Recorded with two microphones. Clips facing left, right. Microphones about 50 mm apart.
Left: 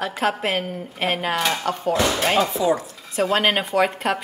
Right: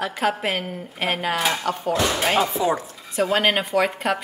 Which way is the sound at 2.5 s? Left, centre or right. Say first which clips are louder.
Left 2 dB; right.